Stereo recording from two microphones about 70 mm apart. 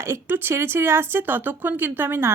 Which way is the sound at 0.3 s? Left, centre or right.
Right.